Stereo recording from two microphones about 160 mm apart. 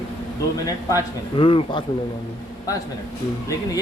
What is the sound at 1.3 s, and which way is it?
Speech, 30° left (ahead or behind).